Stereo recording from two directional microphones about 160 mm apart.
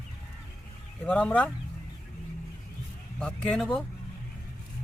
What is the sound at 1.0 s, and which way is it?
Speech, 10° left (ahead or behind).